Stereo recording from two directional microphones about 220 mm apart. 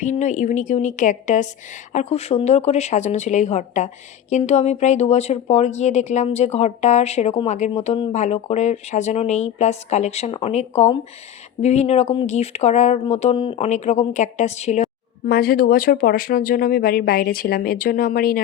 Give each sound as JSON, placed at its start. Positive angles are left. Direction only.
{"t": 0.0, "sound": "speech", "side_deg": 35}